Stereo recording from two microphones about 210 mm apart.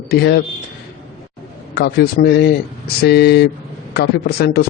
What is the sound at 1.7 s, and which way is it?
A man's voice, 50° left (ahead or behind).